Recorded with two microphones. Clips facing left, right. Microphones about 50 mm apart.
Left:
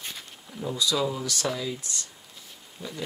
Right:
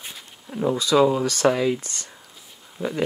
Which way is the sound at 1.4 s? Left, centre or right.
Right.